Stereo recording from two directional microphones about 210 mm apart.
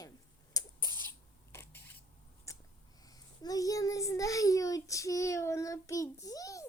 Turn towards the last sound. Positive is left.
turn(degrees=15)  # may be behind; listen again after turning